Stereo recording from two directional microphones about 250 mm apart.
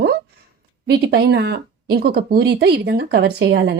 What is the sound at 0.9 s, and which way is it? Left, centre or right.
Speech, right.